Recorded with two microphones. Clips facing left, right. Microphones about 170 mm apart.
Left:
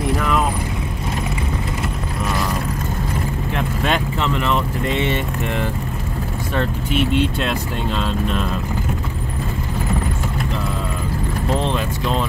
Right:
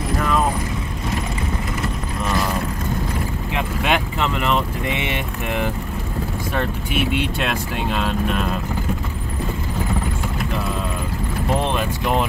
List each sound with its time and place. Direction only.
3.5 s speech: 15° right (ahead or behind)
11.6 s speech: 15° right (ahead or behind)